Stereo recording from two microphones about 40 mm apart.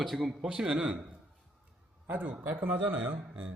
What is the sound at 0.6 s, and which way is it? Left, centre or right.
Speech, right.